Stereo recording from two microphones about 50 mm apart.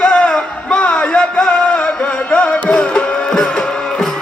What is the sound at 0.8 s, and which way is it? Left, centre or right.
Music, left.